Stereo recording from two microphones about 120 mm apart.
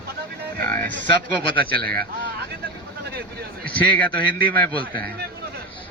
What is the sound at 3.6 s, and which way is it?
A man's voice, 10° left (ahead or behind).